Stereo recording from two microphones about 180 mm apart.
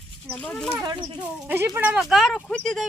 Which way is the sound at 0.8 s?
25° right (ahead or behind).